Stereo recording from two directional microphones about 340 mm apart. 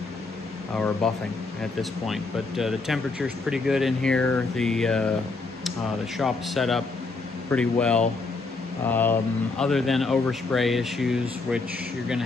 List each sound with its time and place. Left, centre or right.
0.7 s speech: centre
6.1 s speech: centre